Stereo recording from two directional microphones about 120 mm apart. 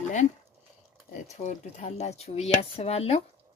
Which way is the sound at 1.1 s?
80° left.